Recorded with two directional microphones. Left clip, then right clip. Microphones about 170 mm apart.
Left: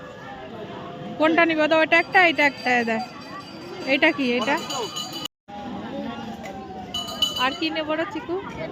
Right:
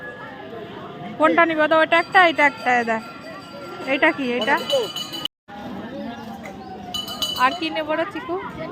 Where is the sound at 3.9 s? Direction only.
25° left (ahead or behind).